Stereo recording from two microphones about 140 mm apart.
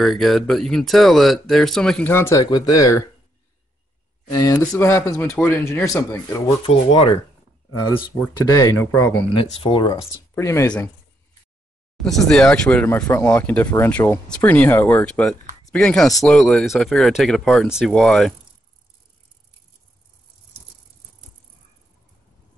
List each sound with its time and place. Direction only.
0.0 s speech: centre (ahead or behind); by 3.1 s 25° left (ahead or behind)
4.4 s speech: 20° left (ahead or behind)
6.6 s speech: 40° left (ahead or behind)
8.5 s speech: 25° left (ahead or behind)
9.3 s speech: 40° left (ahead or behind)
10.3 s speech: 20° left (ahead or behind)
12.0 s speech: 5° left (ahead or behind)